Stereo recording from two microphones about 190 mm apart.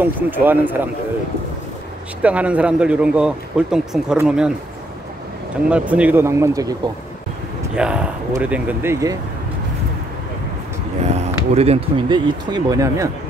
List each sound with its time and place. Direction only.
0.0 s speech: 10° right (ahead or behind)
2.2 s a man's voice: 5° right (ahead or behind)
5.7 s speech: 5° right (ahead or behind)
7.7 s a man's voice: 5° right (ahead or behind)
11.1 s speech: 35° right (ahead or behind); by 13.1 s 15° right (ahead or behind)